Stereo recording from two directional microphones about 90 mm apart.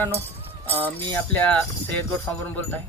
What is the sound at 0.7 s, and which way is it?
Speech, 20° left (ahead or behind).